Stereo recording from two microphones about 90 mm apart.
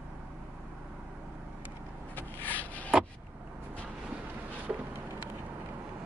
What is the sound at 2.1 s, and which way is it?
Rub, 20° left (ahead or behind).